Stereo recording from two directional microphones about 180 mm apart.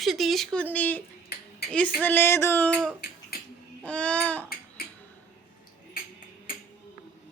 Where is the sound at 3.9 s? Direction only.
5° left (ahead or behind).